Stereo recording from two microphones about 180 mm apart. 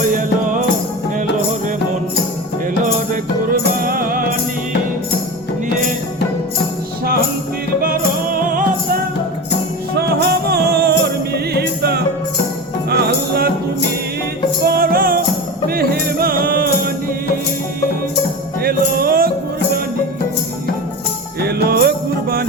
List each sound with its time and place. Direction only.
0.1 s music: 45° right (ahead or behind)
3.8 s music: 55° right (ahead or behind)
7.8 s music: 55° right (ahead or behind)
10.2 s music: 65° right (ahead or behind)
14.6 s music: 60° right (ahead or behind)
18.6 s music: 55° right (ahead or behind)
21.4 s music: 60° right (ahead or behind)